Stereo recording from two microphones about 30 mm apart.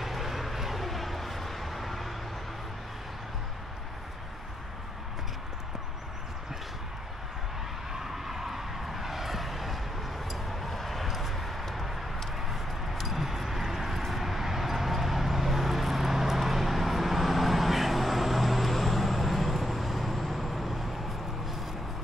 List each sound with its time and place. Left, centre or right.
0.0 s vehicle: centre
7.9 s vehicle: centre
12.4 s a sound: centre